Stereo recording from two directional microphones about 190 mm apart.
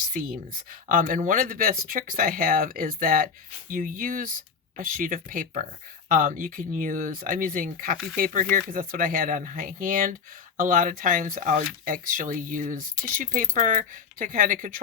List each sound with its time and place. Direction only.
0.1 s speech: 45° right (ahead or behind)